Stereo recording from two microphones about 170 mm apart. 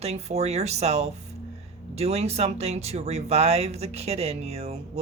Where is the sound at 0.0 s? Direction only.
40° right (ahead or behind).